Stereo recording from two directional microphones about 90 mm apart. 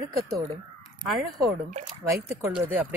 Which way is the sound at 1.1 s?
Centre (ahead or behind).